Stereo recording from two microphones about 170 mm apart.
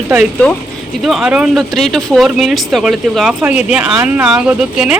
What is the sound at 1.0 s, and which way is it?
A woman's voice, 5° right (ahead or behind).